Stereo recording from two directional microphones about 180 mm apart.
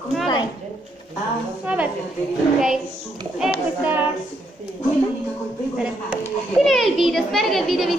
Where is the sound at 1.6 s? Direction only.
10° right (ahead or behind).